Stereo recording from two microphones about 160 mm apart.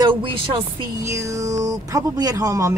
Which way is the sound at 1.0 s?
20° right (ahead or behind).